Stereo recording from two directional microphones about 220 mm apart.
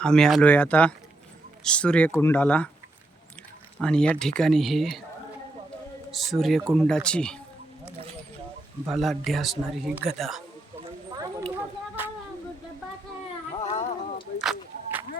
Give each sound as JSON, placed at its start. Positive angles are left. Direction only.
{"t": 0.0, "sound": "speech", "side_deg": 5}
{"t": 3.8, "sound": "speech", "side_deg": 5}
{"t": 6.1, "sound": "speech", "side_deg": 0}
{"t": 8.9, "sound": "speech", "side_deg": 0}
{"t": 10.8, "sound": "a sound", "side_deg": -25}
{"t": 13.7, "sound": "a sound", "side_deg": 30}